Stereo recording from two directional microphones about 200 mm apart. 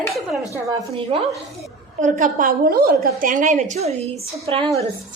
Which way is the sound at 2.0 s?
40° right (ahead or behind).